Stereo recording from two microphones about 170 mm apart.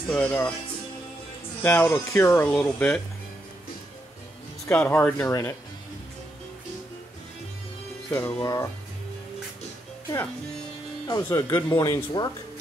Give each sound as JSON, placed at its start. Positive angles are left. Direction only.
{"t": 0.1, "sound": "speech", "side_deg": 10}
{"t": 1.6, "sound": "speech", "side_deg": 15}
{"t": 4.6, "sound": "speech", "side_deg": 10}
{"t": 8.1, "sound": "speech", "side_deg": 10}
{"t": 11.1, "sound": "speech", "side_deg": 20}